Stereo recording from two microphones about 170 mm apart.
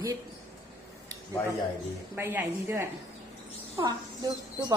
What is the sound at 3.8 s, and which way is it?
Speech, 25° right (ahead or behind).